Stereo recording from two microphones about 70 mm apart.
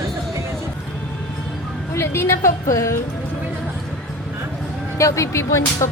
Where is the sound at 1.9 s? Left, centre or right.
Left.